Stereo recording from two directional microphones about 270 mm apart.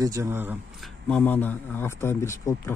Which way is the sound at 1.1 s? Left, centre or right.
Centre.